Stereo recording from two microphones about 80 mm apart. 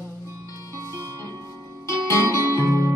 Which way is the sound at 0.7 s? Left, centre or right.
Right.